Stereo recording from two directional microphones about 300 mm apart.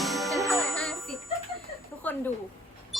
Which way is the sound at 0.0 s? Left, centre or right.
Centre.